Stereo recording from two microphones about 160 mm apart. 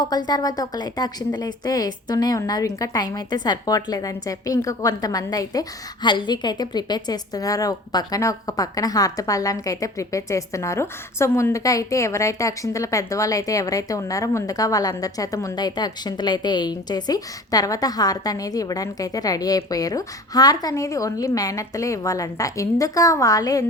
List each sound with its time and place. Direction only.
0.0 s speech: 25° left (ahead or behind)